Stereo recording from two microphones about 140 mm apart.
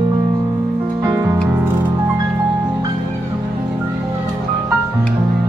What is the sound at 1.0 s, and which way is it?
Music, 20° right (ahead or behind).